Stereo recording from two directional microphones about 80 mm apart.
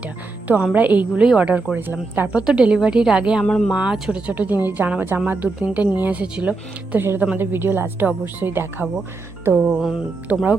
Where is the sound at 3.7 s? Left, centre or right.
Centre.